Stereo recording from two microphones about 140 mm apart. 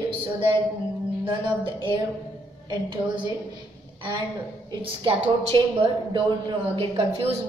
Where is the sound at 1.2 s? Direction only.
35° right (ahead or behind).